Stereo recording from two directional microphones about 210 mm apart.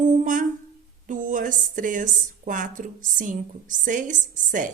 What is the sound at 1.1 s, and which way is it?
A woman's voice, 40° right (ahead or behind).